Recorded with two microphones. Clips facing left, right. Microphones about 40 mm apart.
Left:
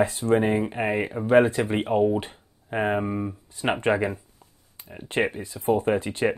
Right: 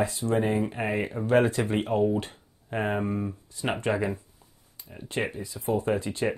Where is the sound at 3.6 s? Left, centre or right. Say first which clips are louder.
Left 4 dB; left.